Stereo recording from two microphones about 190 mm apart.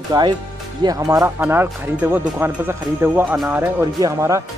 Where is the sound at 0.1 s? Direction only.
25° right (ahead or behind).